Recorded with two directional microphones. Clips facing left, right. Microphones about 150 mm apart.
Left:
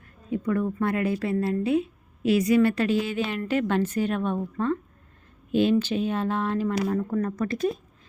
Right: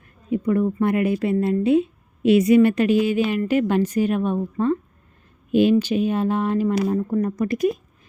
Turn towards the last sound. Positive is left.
turn(degrees=-15)  # may be behind; listen again after turning